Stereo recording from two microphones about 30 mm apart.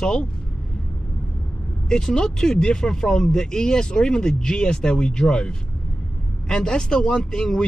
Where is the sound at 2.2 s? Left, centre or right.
Centre.